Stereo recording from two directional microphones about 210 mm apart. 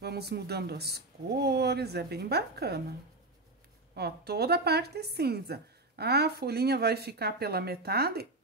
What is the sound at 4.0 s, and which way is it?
A woman's voice, 50° right (ahead or behind).